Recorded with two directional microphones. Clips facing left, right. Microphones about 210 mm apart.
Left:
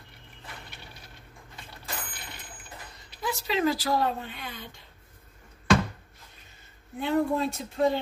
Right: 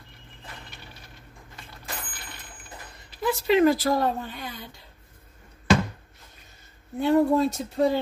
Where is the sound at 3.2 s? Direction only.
55° right (ahead or behind).